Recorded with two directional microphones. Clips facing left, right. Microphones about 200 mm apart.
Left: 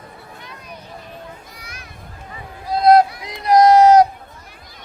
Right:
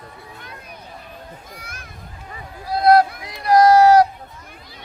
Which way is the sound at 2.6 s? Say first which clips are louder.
Left 2 dB; 20° left (ahead or behind).